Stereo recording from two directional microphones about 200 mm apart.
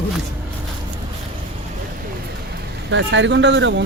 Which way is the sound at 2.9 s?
65° right (ahead or behind).